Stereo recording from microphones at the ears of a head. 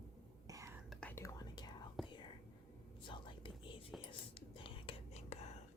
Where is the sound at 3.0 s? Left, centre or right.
Left.